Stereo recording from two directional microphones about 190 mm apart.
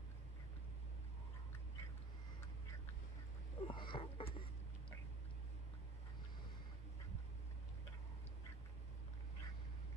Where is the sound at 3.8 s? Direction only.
25° left (ahead or behind).